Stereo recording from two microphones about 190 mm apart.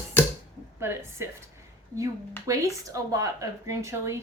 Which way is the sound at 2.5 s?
15° right (ahead or behind).